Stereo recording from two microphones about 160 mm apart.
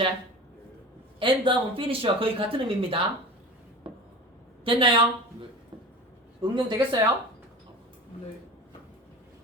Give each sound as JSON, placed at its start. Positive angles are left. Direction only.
{"t": 1.2, "sound": "speech", "side_deg": -35}
{"t": 4.6, "sound": "speech", "side_deg": -35}
{"t": 6.4, "sound": "speech", "side_deg": -25}